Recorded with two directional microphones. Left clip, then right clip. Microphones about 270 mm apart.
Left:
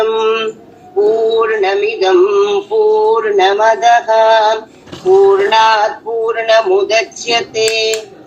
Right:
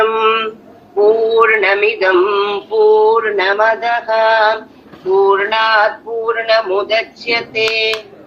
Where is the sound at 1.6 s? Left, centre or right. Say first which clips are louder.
Right 1 dB; centre.